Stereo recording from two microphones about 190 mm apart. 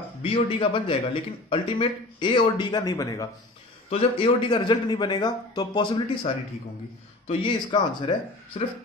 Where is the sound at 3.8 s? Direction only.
30° left (ahead or behind).